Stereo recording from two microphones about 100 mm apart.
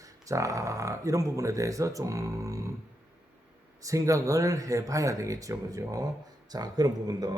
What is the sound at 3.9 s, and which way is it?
Speech, 35° right (ahead or behind).